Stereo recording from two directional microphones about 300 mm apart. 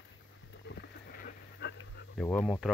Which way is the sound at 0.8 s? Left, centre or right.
Left.